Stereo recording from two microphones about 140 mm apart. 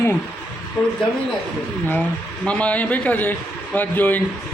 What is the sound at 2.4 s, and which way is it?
A man's voice, 10° left (ahead or behind).